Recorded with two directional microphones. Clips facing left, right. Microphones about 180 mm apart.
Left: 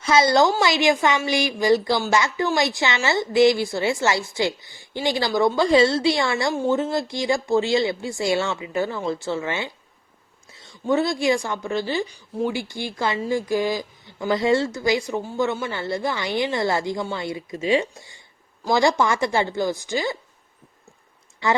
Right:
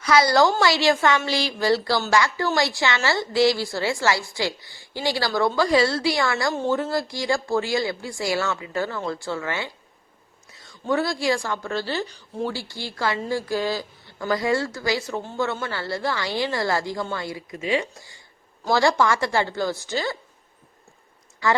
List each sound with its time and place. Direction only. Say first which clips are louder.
0.0 s a woman's voice: left 1 dB; 25° left (ahead or behind)
6.5 s a woman's voice: left 2 dB; 10° left (ahead or behind)
6.9 s a woman's voice: left 1 dB; 20° left (ahead or behind)
21.4 s a woman's voice: even; 20° left (ahead or behind)